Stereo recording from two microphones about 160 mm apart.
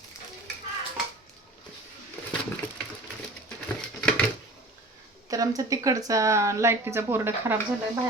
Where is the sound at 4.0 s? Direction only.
5° left (ahead or behind).